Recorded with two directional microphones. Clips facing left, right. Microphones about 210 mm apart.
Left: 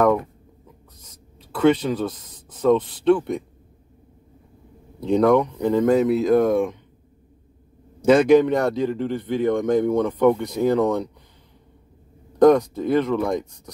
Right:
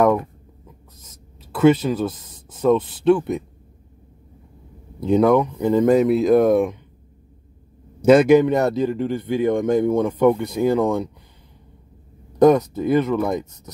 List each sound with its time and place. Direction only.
1.5 s speech: 5° right (ahead or behind)
5.0 s speech: 5° right (ahead or behind)
8.0 s speech: 10° right (ahead or behind)
12.4 s speech: 5° right (ahead or behind)